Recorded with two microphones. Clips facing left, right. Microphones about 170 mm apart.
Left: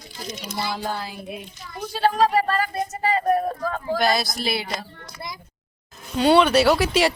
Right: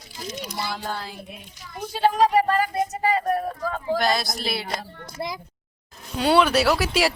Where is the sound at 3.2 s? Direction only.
5° left (ahead or behind).